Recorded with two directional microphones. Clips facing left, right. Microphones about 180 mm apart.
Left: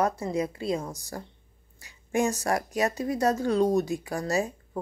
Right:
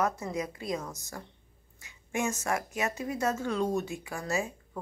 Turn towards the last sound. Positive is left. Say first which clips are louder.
# left 5 dB
turn(degrees=35)  # may be behind; listen again after turning